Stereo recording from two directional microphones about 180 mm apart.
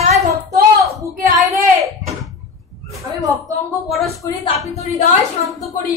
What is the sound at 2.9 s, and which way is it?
Speech, 20° right (ahead or behind).